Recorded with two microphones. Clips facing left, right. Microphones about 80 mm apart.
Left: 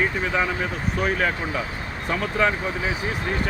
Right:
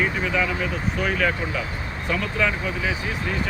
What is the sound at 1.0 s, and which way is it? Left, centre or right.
Speech, left.